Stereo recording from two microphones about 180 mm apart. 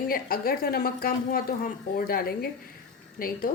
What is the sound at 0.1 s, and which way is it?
A woman's voice, 55° left (ahead or behind).